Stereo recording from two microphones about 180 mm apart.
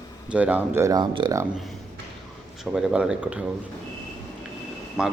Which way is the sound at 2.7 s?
5° right (ahead or behind).